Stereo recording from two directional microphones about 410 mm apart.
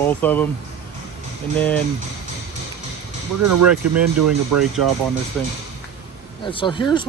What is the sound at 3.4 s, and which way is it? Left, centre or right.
Speech, right.